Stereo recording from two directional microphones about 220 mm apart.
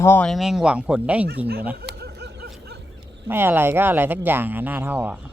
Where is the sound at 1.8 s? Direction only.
45° right (ahead or behind).